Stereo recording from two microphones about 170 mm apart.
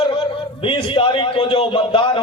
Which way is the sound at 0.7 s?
30° left (ahead or behind).